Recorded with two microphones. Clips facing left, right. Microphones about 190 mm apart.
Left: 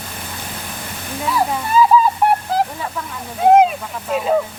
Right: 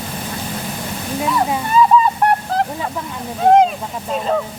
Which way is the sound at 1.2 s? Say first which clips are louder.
Even; centre (ahead or behind).